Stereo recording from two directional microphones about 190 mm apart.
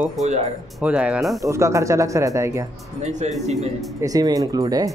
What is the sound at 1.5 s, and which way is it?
Speech, 15° right (ahead or behind).